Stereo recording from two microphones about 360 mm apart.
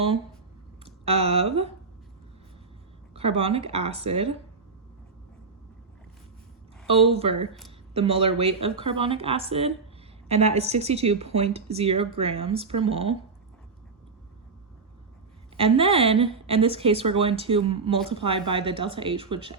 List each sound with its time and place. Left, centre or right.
0.9 s speech: centre
3.2 s a woman's voice: centre
7.1 s a woman's voice: centre
15.5 s a woman's voice: centre